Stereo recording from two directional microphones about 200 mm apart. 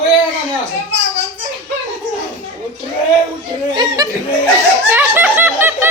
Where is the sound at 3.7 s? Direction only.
20° right (ahead or behind).